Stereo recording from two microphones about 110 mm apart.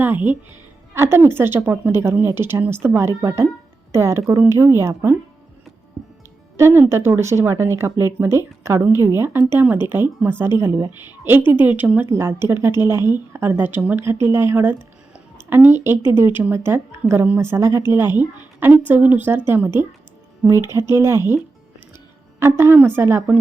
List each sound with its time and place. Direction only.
0.0 s a woman's voice: 15° right (ahead or behind)
6.6 s a woman's voice: 20° right (ahead or behind)